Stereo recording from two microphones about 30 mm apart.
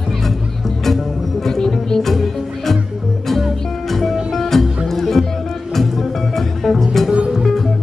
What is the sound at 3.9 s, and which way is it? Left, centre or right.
Music, centre.